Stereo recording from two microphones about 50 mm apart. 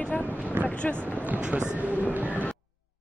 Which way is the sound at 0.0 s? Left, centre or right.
Left.